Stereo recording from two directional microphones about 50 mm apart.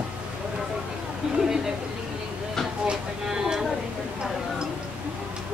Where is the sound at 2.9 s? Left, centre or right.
Centre.